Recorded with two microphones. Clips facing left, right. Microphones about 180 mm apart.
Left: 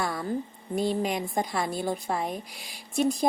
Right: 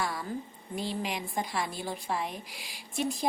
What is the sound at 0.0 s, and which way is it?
A woman's voice, 50° left (ahead or behind).